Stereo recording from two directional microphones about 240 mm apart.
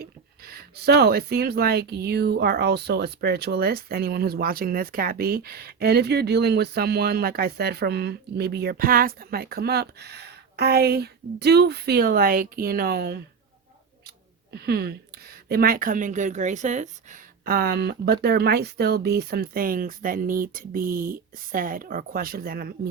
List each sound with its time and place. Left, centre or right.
0.0 s speech: right
14.5 s speech: right